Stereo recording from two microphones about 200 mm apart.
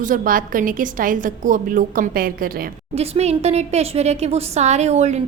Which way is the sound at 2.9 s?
30° right (ahead or behind).